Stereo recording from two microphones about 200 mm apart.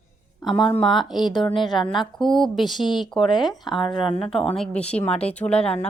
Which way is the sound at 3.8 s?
25° left (ahead or behind).